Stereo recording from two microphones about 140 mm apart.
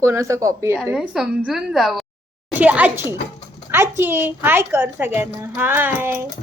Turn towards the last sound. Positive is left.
turn(degrees=-15)  # may be behind; listen again after turning